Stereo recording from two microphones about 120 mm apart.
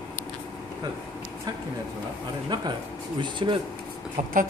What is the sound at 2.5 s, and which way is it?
Speech, 35° right (ahead or behind).